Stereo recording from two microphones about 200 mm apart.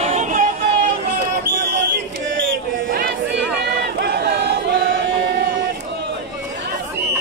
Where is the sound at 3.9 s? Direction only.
55° right (ahead or behind).